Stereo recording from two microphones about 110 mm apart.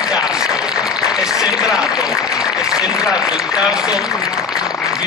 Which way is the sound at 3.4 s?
5° right (ahead or behind).